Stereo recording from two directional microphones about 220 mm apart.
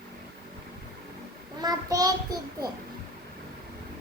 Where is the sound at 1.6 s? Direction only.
15° right (ahead or behind).